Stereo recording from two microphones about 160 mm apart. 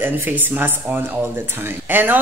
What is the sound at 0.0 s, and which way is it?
Speech, 10° right (ahead or behind).